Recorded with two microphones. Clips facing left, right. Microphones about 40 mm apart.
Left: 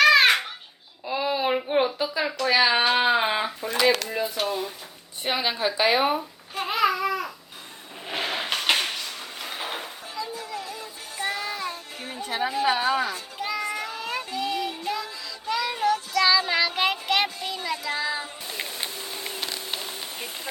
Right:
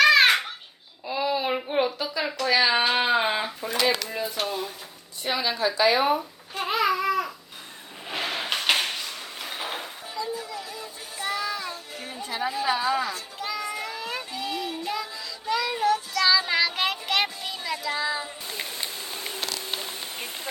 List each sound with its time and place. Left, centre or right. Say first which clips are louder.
0.0 s babbling: even; centre
1.0 s a sound: left 1 dB; centre
5.2 s a woman's voice: even; left
6.5 s babbling: left 1 dB; centre
8.0 s a sound: left 1 dB; centre
10.8 s music: left 2 dB; centre
12.0 s music: left 3 dB; left
12.6 s a sound: left 1 dB; left
13.1 s children playing: left 2 dB; centre
13.7 s child singing: left 1 dB; centre
14.3 s child singing: left 3 dB; centre
19.4 s a sound: right 2 dB; left
20.1 s rain on surface: even; right